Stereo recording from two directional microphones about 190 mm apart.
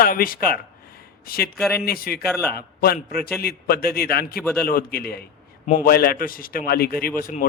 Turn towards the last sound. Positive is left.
turn(degrees=45)  # may be behind; listen again after turning